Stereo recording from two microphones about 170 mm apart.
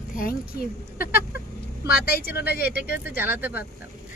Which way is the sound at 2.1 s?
65° left (ahead or behind).